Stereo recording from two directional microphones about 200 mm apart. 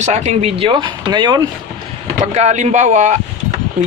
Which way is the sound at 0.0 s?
35° right (ahead or behind).